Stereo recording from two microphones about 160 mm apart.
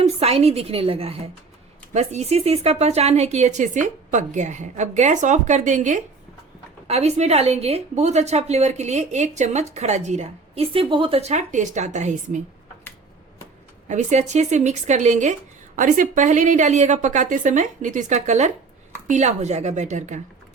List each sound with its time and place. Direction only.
0.0 s a woman's voice: 40° right (ahead or behind)
13.8 s a woman's voice: 50° right (ahead or behind)